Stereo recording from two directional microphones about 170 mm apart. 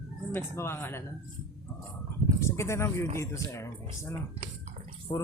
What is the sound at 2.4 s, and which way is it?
Speech, 15° left (ahead or behind).